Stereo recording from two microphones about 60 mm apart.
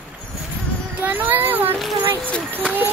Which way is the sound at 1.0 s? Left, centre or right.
Right.